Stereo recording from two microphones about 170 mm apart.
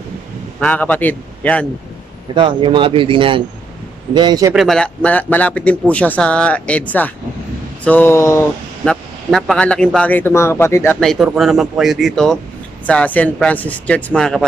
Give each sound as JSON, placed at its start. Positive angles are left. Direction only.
{"t": 0.6, "sound": "speech", "side_deg": 10}
{"t": 2.3, "sound": "speech", "side_deg": -30}
{"t": 4.6, "sound": "speech", "side_deg": 5}
{"t": 8.8, "sound": "speech", "side_deg": 5}
{"t": 11.0, "sound": "speech", "side_deg": 0}